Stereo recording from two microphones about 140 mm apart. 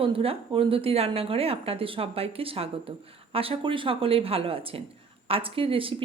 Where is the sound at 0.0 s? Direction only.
40° right (ahead or behind).